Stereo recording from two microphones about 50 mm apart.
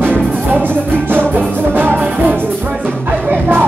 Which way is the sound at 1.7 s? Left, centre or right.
Right.